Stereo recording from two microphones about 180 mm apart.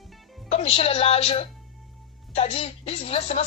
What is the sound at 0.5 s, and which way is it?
Speech, 35° left (ahead or behind).